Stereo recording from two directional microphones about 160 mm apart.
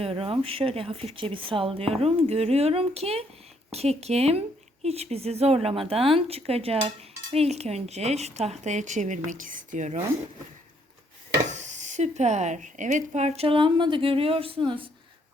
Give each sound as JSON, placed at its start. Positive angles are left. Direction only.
{"t": 0.0, "sound": "a woman's voice", "side_deg": -35}
{"t": 11.4, "sound": "speech", "side_deg": -45}